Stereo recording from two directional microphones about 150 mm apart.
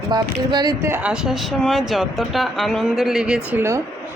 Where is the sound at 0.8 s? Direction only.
10° right (ahead or behind).